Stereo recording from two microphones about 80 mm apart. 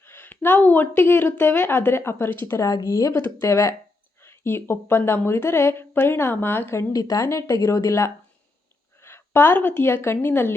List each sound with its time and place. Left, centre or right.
0.0 s speech: left
2.6 s a woman's voice: left
4.2 s a woman's voice: left
6.9 s a woman's voice: left